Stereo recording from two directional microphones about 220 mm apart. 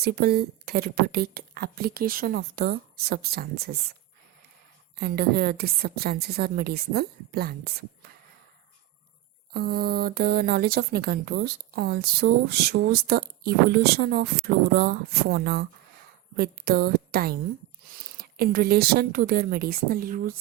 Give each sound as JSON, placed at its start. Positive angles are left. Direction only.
{"t": 0.0, "sound": "speech", "side_deg": -45}
{"t": 4.9, "sound": "speech", "side_deg": -45}
{"t": 9.5, "sound": "a woman's voice", "side_deg": -45}